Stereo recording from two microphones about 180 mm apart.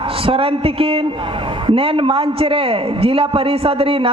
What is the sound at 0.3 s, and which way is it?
A man's voice, 30° right (ahead or behind).